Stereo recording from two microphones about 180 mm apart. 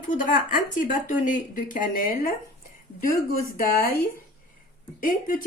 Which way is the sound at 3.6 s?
55° left (ahead or behind).